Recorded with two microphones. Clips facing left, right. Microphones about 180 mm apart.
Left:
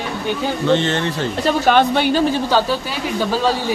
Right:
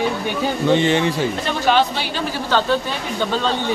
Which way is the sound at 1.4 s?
50° left (ahead or behind).